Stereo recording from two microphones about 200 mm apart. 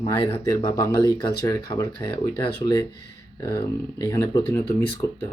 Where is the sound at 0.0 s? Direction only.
15° left (ahead or behind).